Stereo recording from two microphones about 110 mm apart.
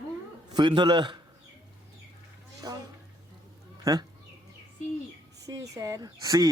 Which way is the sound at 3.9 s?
30° right (ahead or behind).